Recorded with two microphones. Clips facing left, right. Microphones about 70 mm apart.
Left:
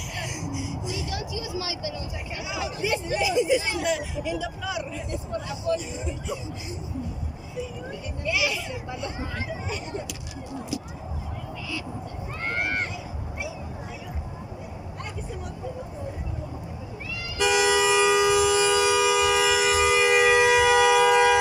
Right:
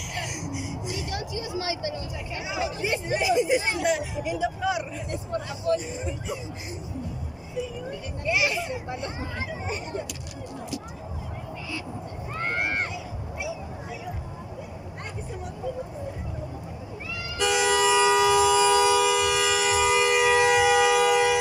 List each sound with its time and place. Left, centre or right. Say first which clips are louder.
0.8 s vehicle: even; right
4.2 s speech: right 3 dB; right
8.3 s speech: right 2 dB; right
17.4 s civil defense siren: left 1 dB; centre